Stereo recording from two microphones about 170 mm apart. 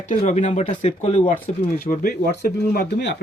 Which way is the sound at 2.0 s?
65° left (ahead or behind).